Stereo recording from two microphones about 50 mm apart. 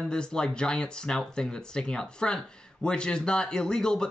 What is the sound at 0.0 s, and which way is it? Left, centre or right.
Speech, centre.